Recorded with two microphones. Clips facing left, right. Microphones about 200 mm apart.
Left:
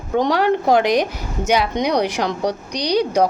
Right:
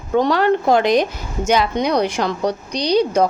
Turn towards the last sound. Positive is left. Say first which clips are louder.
# right 2 dB
turn(degrees=15)  # may be behind; listen again after turning